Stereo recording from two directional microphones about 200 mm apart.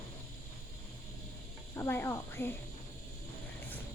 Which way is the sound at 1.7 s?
10° left (ahead or behind).